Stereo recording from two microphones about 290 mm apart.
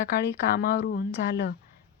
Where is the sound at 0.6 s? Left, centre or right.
Left.